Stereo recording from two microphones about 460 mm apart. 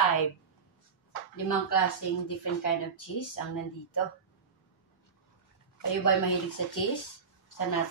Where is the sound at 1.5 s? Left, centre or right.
Left.